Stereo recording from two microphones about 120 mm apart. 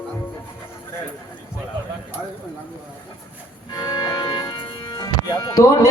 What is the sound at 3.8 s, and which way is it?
Music, 35° left (ahead or behind).